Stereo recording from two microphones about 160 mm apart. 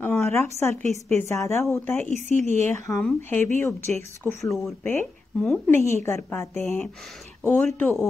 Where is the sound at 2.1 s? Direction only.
45° right (ahead or behind).